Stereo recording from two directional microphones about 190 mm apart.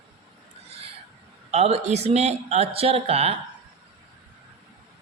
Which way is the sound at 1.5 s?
35° right (ahead or behind).